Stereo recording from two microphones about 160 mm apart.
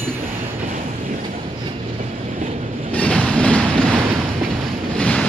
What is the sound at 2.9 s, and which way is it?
Train, 5° left (ahead or behind).